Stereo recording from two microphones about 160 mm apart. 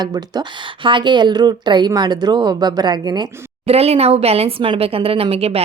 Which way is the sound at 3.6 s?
40° right (ahead or behind).